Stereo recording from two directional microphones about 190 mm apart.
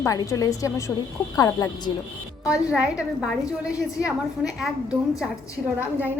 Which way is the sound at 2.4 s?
5° right (ahead or behind).